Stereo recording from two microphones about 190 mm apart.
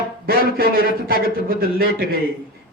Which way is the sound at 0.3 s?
50° right (ahead or behind).